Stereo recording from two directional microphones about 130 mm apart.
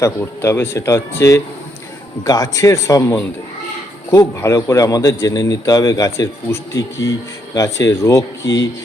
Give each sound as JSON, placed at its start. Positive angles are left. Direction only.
{"t": 0.0, "sound": "a man's voice", "side_deg": 20}